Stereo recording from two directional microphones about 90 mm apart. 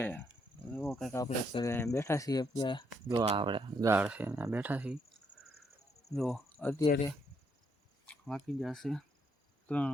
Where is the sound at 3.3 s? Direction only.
65° right (ahead or behind).